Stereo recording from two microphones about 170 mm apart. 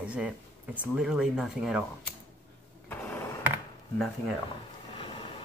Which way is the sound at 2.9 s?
10° left (ahead or behind).